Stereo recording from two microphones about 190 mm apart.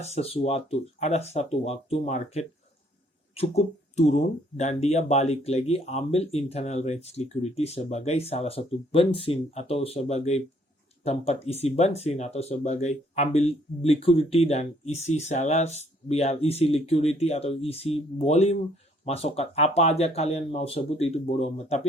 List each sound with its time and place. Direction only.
0.0 s speech: 35° left (ahead or behind)